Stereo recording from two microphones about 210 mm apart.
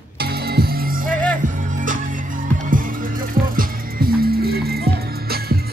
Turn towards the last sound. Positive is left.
turn(degrees=-45)  # may be behind; listen again after turning